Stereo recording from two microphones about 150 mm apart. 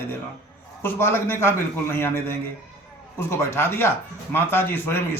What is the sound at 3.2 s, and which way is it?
A man's voice, 15° left (ahead or behind).